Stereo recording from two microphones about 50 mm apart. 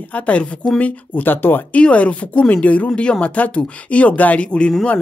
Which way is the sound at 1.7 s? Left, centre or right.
Left.